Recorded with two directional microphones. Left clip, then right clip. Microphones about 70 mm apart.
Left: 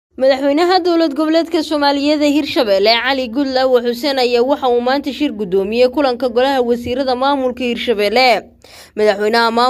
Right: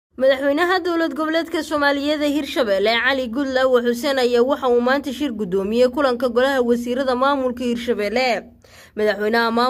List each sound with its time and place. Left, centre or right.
0.2 s speech: left
1.9 s a man's voice: centre
3.3 s a man's voice: centre
7.4 s speech: centre
7.9 s speech: left
9.0 s speech: left